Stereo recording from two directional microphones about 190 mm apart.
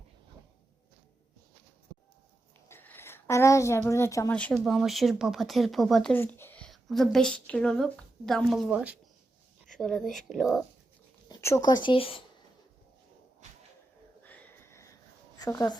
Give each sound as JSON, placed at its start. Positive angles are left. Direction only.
{"t": 2.6, "sound": "a woman's voice", "side_deg": 10}
{"t": 11.3, "sound": "speech", "side_deg": 15}
{"t": 14.3, "sound": "a sound", "side_deg": 10}
{"t": 15.4, "sound": "speech", "side_deg": 15}